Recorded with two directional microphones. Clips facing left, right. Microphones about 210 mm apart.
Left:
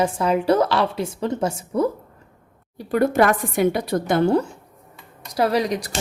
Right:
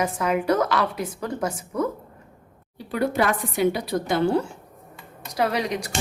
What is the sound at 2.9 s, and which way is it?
A woman's voice, 50° left (ahead or behind).